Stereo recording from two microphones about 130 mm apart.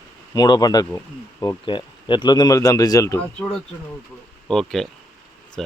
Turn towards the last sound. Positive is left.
turn(degrees=5)  # may be behind; listen again after turning